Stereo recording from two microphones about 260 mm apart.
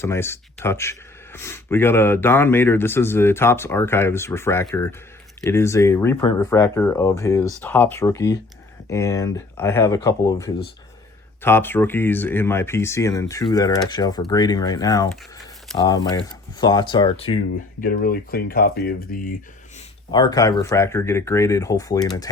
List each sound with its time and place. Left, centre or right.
0.0 s speech: centre
17.8 s speech: left
20.1 s speech: centre